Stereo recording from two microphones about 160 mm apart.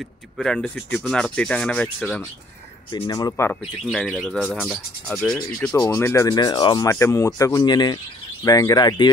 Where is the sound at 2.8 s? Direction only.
25° left (ahead or behind).